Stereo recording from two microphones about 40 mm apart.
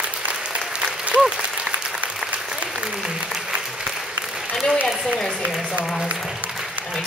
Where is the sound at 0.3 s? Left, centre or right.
Right.